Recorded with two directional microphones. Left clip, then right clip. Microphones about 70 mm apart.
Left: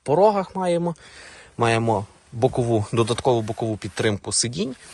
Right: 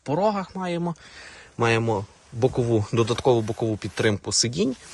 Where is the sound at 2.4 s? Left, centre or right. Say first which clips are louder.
Left 2 dB; right.